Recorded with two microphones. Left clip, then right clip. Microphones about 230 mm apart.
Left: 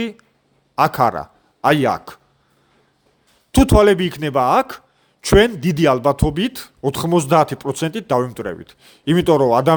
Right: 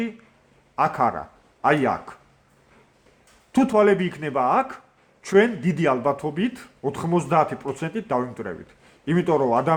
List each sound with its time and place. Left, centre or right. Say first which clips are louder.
0.8 s speech: left 5 dB; left
3.5 s a man's voice: left 5 dB; left